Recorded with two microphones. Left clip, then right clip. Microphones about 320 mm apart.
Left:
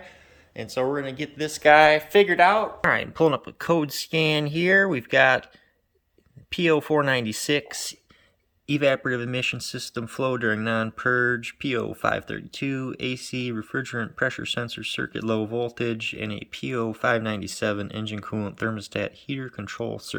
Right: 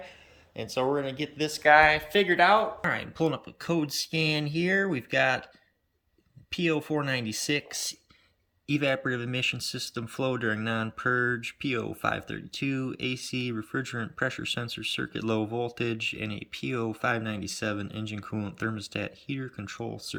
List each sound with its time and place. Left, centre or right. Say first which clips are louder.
0.5 s speech: left 2 dB; centre
1.6 s speech: left 4 dB; left
1.9 s speech: left 6 dB; centre
6.5 s speech: left 7 dB; centre